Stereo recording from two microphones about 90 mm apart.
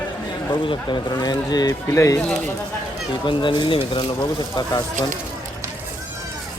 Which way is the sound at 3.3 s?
60° left (ahead or behind).